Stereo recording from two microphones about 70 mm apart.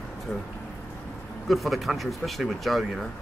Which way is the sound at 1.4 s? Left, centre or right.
Centre.